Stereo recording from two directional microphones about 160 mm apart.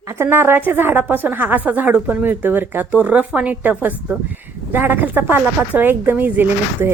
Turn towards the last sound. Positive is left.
turn(degrees=-10)  # may be behind; listen again after turning